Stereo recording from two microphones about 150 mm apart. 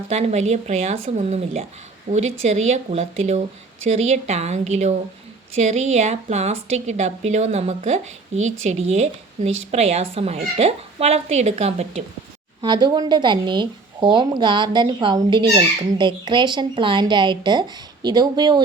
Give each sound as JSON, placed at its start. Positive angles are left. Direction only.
{"t": 0.1, "sound": "a woman's voice", "side_deg": -45}
{"t": 12.6, "sound": "a woman's voice", "side_deg": -30}